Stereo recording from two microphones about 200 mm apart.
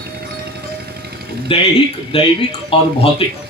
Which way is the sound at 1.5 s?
30° left (ahead or behind).